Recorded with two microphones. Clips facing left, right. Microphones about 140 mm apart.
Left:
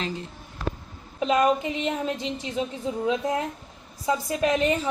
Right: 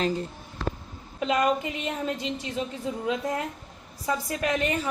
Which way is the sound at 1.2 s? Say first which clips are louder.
Left 3 dB; 25° left (ahead or behind).